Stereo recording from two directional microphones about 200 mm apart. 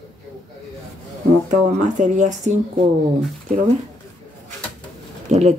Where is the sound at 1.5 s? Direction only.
35° right (ahead or behind).